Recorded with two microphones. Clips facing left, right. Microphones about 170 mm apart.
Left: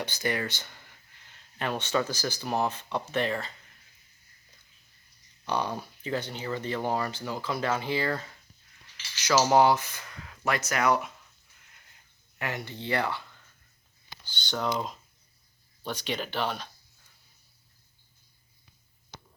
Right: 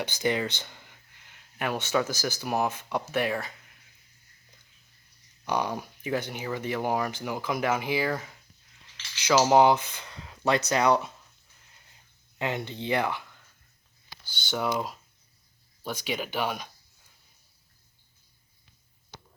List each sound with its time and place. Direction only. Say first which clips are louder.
0.0 s speech: right 3 dB; 15° right (ahead or behind)
5.5 s speech: right 1 dB; 15° right (ahead or behind)
10.1 s a sound: right 4 dB; 25° right (ahead or behind)
10.7 s speech: right 1 dB; 25° right (ahead or behind)
12.4 s speech: right 4 dB; 20° right (ahead or behind)
14.3 s speech: right 1 dB; 5° right (ahead or behind)